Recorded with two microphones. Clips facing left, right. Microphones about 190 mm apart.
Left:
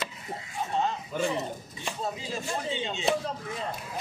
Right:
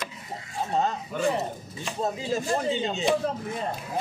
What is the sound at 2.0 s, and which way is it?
Speech, 45° right (ahead or behind).